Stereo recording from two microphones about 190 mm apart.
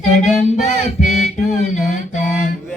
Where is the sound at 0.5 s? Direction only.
40° left (ahead or behind).